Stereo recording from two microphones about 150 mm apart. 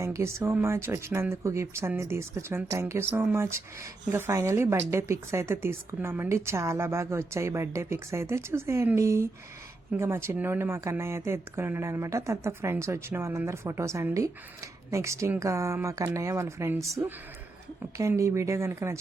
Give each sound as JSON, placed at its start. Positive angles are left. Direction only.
{"t": 0.0, "sound": "speech", "side_deg": -20}